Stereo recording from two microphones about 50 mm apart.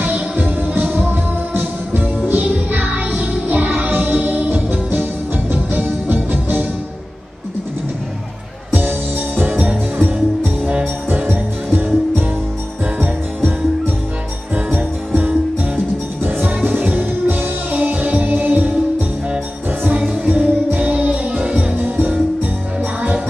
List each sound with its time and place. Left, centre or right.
0.0 s music: right
2.4 s music: right
5.5 s music: right
9.5 s music: right
9.9 s music: right
14.5 s music: right
20.2 s music: right
21.7 s music: right